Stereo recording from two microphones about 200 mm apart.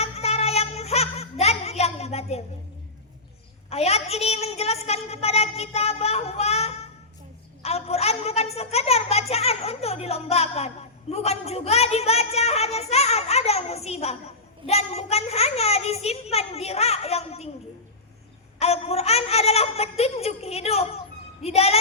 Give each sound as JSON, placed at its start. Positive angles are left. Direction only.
{"t": 0.0, "sound": "music", "side_deg": 30}
{"t": 3.7, "sound": "a woman's voice", "side_deg": 30}
{"t": 18.6, "sound": "a woman's voice", "side_deg": 30}